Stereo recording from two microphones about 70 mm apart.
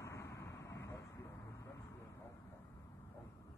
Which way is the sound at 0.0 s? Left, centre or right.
Left.